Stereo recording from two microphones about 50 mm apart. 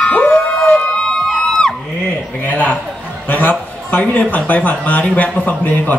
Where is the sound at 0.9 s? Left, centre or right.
Centre.